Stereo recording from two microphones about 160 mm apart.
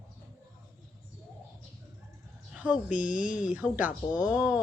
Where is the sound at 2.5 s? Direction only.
5° right (ahead or behind).